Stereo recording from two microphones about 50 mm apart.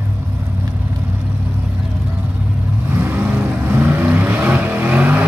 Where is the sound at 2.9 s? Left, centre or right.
Right.